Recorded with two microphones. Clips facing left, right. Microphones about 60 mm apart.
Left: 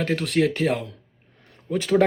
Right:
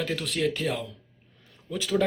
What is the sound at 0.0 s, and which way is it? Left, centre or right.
Speech, left.